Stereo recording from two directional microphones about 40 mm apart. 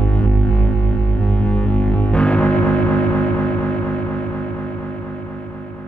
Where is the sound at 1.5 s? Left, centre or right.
Left.